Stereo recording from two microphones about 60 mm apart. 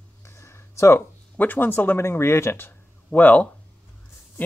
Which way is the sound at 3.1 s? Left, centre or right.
Left.